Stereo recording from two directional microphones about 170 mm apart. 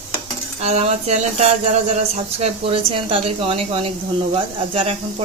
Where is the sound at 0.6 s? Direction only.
40° right (ahead or behind).